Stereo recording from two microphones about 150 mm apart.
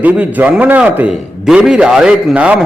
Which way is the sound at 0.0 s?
10° right (ahead or behind).